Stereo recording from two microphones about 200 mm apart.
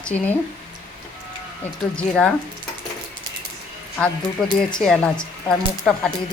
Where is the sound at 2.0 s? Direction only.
5° left (ahead or behind).